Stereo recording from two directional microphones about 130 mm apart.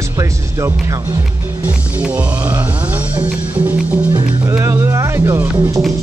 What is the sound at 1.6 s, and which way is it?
Music, 15° right (ahead or behind).